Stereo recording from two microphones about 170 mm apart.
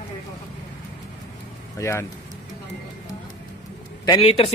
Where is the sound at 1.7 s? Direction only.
15° left (ahead or behind).